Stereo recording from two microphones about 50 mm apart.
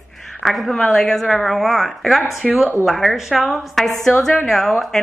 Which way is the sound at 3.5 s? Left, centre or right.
Centre.